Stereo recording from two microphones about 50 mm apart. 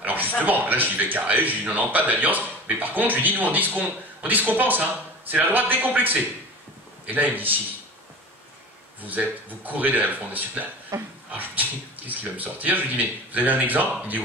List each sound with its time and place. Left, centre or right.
0.0 s a sound: right
0.4 s speech: right
9.0 s speech: right
10.9 s speech: right
11.3 s speech: right